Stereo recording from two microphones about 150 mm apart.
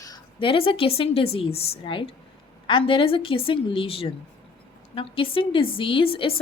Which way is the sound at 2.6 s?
35° left (ahead or behind).